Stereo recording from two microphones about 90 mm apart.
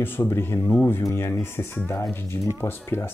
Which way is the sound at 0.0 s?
25° left (ahead or behind).